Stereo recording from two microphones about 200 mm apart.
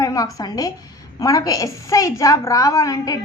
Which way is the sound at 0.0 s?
15° left (ahead or behind).